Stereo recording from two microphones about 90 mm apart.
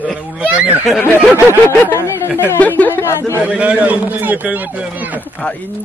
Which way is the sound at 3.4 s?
15° right (ahead or behind).